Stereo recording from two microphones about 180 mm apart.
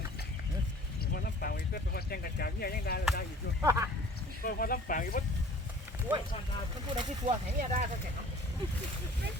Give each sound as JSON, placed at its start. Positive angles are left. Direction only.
{"t": 1.1, "sound": "speech", "side_deg": 60}
{"t": 3.6, "sound": "speech", "side_deg": -15}
{"t": 4.4, "sound": "speech", "side_deg": 50}
{"t": 6.1, "sound": "speech", "side_deg": -10}
{"t": 6.9, "sound": "speech", "side_deg": -30}